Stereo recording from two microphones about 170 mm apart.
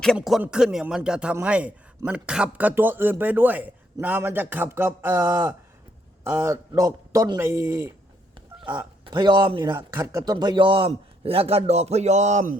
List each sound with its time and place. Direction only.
0.2 s a man's voice: 5° right (ahead or behind)
8.4 s a man's voice: 25° right (ahead or behind); by 12.5 s 45° right (ahead or behind)